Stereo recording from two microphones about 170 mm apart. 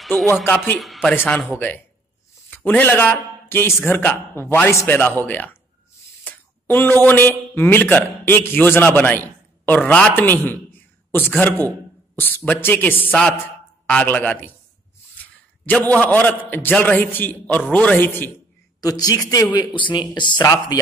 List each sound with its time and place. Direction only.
0.0 s speech: centre (ahead or behind)
0.3 s a man's voice: 10° left (ahead or behind)
0.7 s speech: centre (ahead or behind)
1.1 s a man's voice: 10° left (ahead or behind)
18.8 s speech: 20° left (ahead or behind)